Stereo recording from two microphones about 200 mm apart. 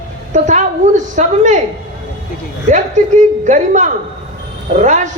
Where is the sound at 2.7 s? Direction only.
35° right (ahead or behind).